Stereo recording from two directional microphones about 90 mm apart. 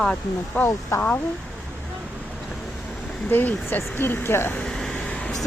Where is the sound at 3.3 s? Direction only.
20° left (ahead or behind).